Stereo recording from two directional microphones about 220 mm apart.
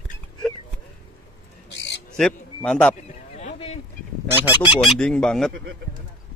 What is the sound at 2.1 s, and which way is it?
Speech, 5° left (ahead or behind).